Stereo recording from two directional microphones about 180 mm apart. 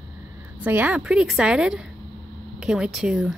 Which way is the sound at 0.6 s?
10° right (ahead or behind).